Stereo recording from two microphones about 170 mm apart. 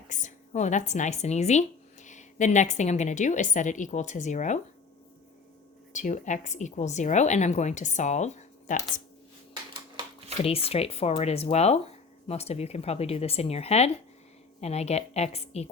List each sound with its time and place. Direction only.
0.1 s speech: 45° left (ahead or behind)
5.9 s a woman's voice: 45° left (ahead or behind)
10.0 s a sound: 35° right (ahead or behind)
10.4 s speech: 35° left (ahead or behind)